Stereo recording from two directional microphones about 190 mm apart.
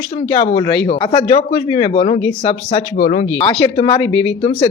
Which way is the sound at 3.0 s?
40° left (ahead or behind).